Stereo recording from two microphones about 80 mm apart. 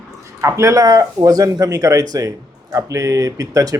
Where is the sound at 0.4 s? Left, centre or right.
Right.